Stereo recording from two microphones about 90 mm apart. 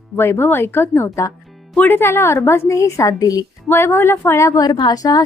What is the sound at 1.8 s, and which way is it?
A woman's voice, 20° left (ahead or behind).